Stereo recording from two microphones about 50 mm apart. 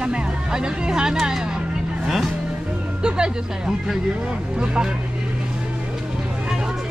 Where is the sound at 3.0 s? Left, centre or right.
Centre.